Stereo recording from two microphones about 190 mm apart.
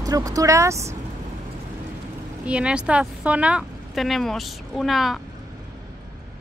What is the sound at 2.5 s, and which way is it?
Speech, 5° right (ahead or behind).